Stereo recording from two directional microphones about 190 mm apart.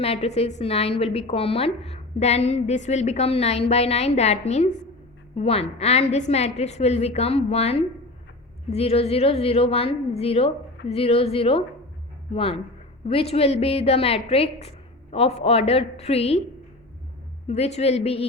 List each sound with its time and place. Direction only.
0.0 s a woman's voice: 30° left (ahead or behind)
17.5 s a woman's voice: 35° left (ahead or behind)